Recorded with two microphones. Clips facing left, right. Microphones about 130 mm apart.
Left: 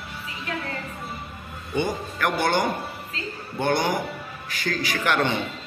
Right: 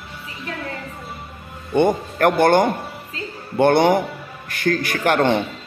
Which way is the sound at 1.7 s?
55° right (ahead or behind).